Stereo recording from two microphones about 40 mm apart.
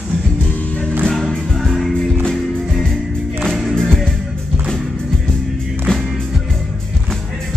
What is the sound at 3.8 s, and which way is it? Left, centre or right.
Music, centre.